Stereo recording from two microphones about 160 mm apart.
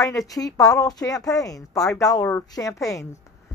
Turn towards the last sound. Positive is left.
turn(degrees=20)  # may be behind; listen again after turning